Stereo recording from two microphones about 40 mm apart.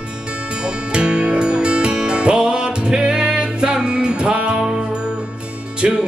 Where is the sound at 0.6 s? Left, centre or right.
Right.